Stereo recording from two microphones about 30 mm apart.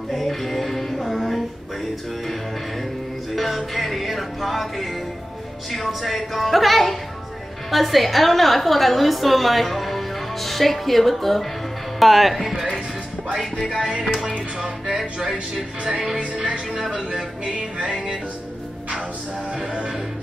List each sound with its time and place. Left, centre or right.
0.1 s music: centre
3.3 s music: centre
5.9 s a woman's voice: centre
13.4 s music: centre
14.0 s music: centre
19.6 s music: right